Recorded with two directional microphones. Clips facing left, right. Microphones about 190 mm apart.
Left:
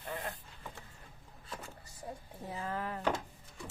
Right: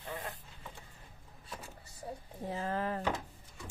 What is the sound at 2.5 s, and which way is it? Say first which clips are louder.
Speech: right 3 dB; 35° right (ahead or behind).